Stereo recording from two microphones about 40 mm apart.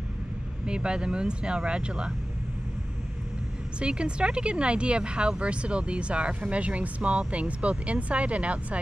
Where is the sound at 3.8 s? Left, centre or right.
Right.